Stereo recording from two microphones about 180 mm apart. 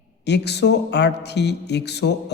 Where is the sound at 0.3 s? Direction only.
70° left (ahead or behind).